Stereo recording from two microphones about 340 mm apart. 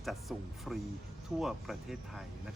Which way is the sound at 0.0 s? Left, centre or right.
Centre.